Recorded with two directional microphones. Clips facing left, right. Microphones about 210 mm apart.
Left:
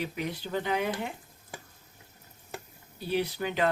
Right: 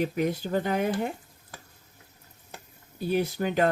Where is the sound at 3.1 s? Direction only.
45° right (ahead or behind).